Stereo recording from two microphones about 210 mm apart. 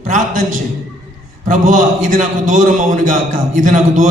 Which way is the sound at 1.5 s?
40° right (ahead or behind).